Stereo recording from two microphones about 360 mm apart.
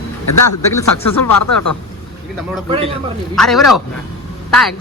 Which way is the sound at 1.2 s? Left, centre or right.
Left.